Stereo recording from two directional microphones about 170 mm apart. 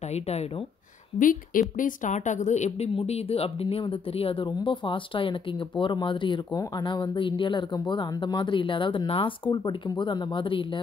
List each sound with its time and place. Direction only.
0.1 s speech: 40° left (ahead or behind)
1.2 s a woman's voice: 55° left (ahead or behind); by 10.8 s 30° left (ahead or behind)